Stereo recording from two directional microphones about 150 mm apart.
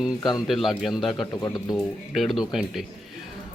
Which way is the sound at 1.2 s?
25° left (ahead or behind).